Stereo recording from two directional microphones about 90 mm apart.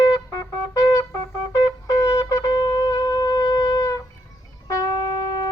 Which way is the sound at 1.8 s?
40° left (ahead or behind).